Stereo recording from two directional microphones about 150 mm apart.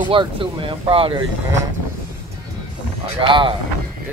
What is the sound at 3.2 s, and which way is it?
Speech, 35° right (ahead or behind).